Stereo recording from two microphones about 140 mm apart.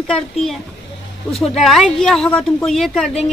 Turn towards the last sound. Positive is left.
turn(degrees=5)  # may be behind; listen again after turning